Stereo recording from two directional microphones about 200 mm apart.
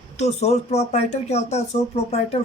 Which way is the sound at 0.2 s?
35° left (ahead or behind).